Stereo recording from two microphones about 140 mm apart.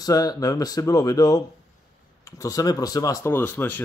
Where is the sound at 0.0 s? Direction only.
30° left (ahead or behind).